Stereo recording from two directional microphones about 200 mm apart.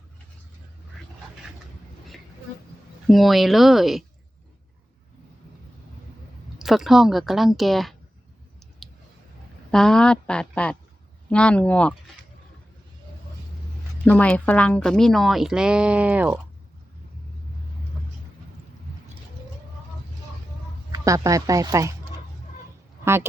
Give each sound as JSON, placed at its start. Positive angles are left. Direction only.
{"t": 3.1, "sound": "speech", "side_deg": 0}
{"t": 6.6, "sound": "speech", "side_deg": 0}
{"t": 8.8, "sound": "clicking", "side_deg": 0}
{"t": 9.7, "sound": "speech", "side_deg": 5}
{"t": 14.0, "sound": "speech", "side_deg": 5}
{"t": 20.9, "sound": "speech", "side_deg": -15}